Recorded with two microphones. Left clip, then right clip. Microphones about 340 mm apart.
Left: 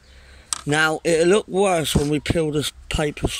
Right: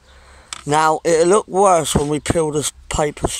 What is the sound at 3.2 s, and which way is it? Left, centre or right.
Speech, right.